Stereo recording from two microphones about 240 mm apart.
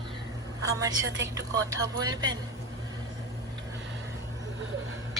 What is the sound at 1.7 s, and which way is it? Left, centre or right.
Speech, centre.